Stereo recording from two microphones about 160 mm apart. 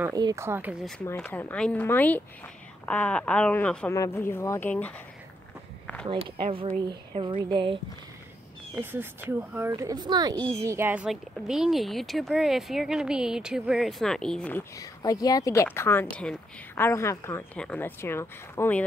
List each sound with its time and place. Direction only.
0.0 s speech: 25° right (ahead or behind)
1.1 s speech: 10° left (ahead or behind)
6.0 s speech: 35° right (ahead or behind)
8.9 s speech: 10° right (ahead or behind)
9.7 s speech: 25° right (ahead or behind); by 18.9 s 10° left (ahead or behind)